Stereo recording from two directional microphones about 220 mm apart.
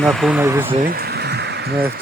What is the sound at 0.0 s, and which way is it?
Speech, centre (ahead or behind).